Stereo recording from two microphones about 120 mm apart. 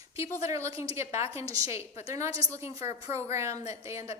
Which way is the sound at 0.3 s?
25° right (ahead or behind).